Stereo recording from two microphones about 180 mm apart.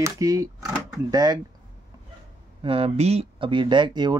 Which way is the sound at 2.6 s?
30° right (ahead or behind).